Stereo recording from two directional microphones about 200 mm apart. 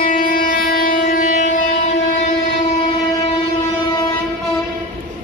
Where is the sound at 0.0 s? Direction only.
45° left (ahead or behind).